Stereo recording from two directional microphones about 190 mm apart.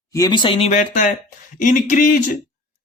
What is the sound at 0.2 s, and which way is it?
A man's voice, 25° left (ahead or behind).